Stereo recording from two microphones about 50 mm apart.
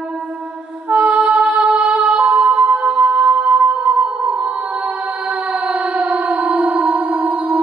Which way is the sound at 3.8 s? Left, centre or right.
Right.